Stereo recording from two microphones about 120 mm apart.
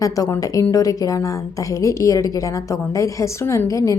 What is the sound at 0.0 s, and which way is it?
A woman's voice, 30° left (ahead or behind).